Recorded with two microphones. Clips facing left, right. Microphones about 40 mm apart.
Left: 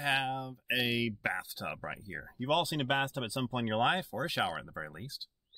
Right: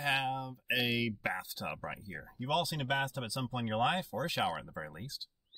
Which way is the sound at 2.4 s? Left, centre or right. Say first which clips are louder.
Left 3 dB; left.